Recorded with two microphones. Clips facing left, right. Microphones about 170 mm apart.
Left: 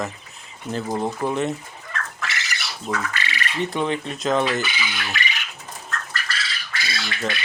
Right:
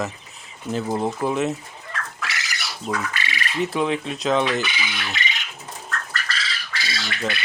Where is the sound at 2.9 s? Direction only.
15° right (ahead or behind).